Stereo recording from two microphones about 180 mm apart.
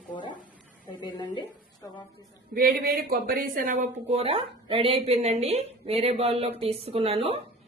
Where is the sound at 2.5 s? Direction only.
55° right (ahead or behind).